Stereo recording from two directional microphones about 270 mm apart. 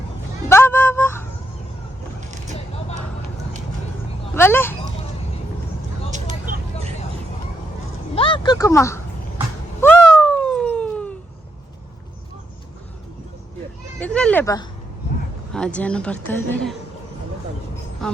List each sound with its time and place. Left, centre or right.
0.4 s vehicle: centre
4.4 s a sound: centre
6.1 s vehicle: right
8.1 s a sound: centre
9.8 s cat: centre
14.0 s children playing: centre
15.5 s a woman's voice: centre